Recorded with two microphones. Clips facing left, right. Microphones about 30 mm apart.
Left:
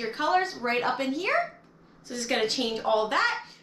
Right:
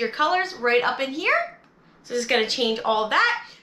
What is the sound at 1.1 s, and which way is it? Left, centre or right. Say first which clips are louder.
Speech: right 4 dB; right.